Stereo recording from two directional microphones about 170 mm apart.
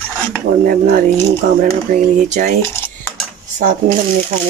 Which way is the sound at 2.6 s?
15° left (ahead or behind).